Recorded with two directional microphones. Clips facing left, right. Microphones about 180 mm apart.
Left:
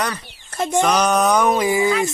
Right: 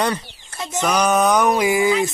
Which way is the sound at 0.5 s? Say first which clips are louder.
Left 8 dB; 50° left (ahead or behind).